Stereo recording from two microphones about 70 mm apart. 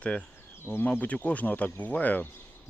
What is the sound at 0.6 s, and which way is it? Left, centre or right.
Speech, left.